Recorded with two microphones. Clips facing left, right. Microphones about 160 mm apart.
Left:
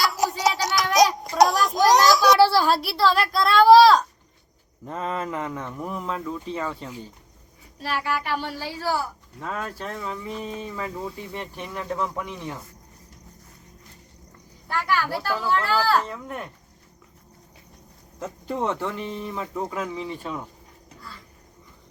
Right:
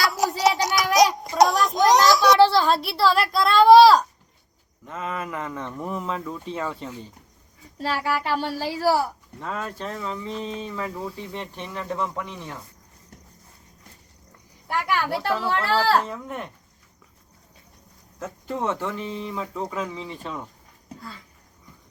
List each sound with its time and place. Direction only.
0.0 s a sound: centre (ahead or behind)
4.9 s speech: 35° left (ahead or behind); by 6.9 s centre (ahead or behind)
8.2 s speech: 30° right (ahead or behind)
9.4 s speech: centre (ahead or behind)
14.7 s a woman's voice: 20° right (ahead or behind)
16.0 s speech: centre (ahead or behind)
18.2 s speech: 15° left (ahead or behind)